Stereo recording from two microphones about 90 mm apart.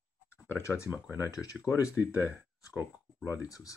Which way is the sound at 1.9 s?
20° right (ahead or behind).